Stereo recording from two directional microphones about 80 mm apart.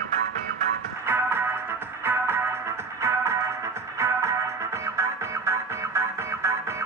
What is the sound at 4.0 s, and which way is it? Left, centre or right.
Music, right.